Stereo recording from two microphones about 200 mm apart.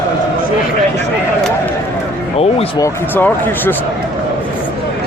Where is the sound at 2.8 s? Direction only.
10° left (ahead or behind).